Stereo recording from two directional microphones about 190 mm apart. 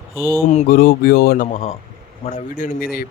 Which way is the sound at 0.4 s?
45° left (ahead or behind).